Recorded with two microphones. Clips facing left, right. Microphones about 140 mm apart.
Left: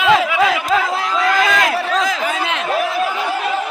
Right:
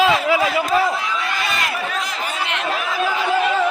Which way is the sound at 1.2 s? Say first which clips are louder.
Left 9 dB; 90° left.